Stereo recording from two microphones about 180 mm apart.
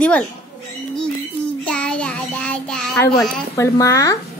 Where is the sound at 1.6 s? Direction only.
5° left (ahead or behind).